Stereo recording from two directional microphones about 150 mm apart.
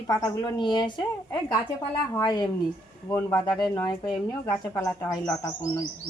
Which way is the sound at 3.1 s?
15° left (ahead or behind).